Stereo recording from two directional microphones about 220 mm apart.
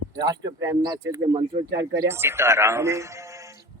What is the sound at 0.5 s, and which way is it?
Speech, 15° right (ahead or behind).